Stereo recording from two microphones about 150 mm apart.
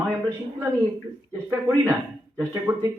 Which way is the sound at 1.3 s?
15° right (ahead or behind).